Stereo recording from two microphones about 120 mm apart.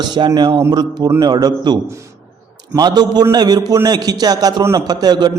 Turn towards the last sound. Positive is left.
turn(degrees=-35)  # may be behind; listen again after turning